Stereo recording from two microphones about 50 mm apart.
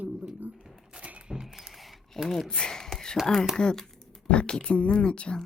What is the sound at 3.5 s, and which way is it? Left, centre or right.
Speech, centre.